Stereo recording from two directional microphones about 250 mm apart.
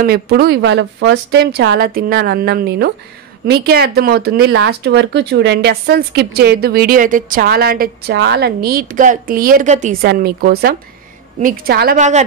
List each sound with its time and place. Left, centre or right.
0.0 s speech: right